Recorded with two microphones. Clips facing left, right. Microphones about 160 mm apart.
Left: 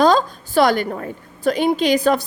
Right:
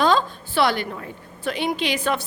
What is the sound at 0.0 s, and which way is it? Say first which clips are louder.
A woman's voice: left 5 dB; 40° left (ahead or behind).